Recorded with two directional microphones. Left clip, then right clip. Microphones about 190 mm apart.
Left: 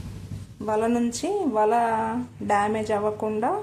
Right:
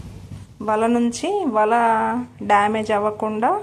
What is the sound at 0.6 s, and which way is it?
A woman's voice, 15° right (ahead or behind).